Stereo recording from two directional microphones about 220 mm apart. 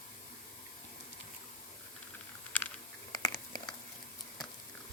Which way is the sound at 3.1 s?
20° left (ahead or behind).